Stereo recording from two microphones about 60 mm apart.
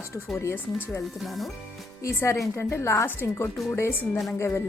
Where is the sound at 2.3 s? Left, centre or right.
Left.